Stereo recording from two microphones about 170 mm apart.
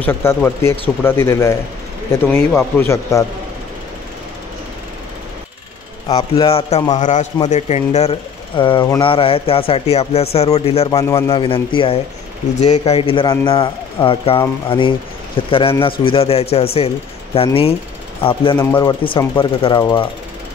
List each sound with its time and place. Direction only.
0.0 s speech: 15° left (ahead or behind)
6.1 s speech: 35° left (ahead or behind)
6.9 s a man's voice: 45° left (ahead or behind)
18.6 s speech: 15° left (ahead or behind)
18.9 s speech: 30° left (ahead or behind)